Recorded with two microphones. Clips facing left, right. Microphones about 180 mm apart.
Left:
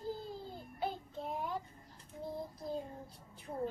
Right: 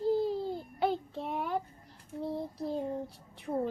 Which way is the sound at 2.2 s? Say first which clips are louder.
Right 7 dB; 70° right (ahead or behind).